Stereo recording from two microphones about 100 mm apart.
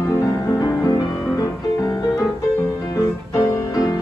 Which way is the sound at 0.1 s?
35° left (ahead or behind).